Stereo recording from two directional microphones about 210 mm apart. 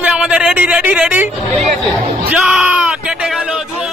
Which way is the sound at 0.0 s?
5° right (ahead or behind).